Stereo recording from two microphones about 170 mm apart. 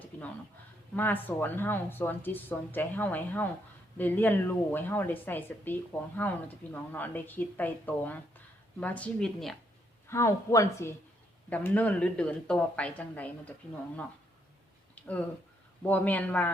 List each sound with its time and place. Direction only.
0.9 s a woman's voice: 10° left (ahead or behind)
10.1 s speech: 15° left (ahead or behind)
14.9 s a sound: 10° left (ahead or behind)
15.9 s speech: 10° left (ahead or behind)